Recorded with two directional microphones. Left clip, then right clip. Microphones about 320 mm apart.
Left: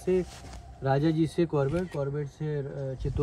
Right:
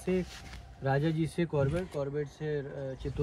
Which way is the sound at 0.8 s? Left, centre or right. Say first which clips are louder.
Left 5 dB; centre.